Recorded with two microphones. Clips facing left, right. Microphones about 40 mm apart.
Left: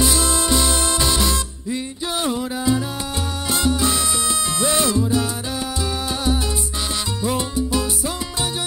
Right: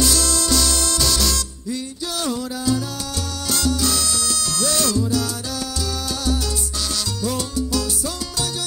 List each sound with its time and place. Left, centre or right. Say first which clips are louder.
0.0 s music: left 1 dB; left
3.4 s salsa music: left 2 dB; left
7.2 s salsa music: left 2 dB; left